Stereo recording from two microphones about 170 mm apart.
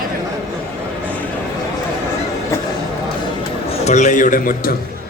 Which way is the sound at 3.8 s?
45° left (ahead or behind).